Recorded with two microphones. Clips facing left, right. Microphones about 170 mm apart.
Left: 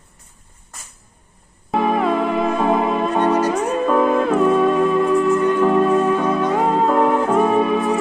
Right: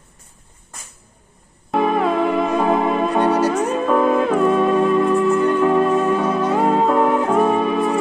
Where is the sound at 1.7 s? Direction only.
Centre (ahead or behind).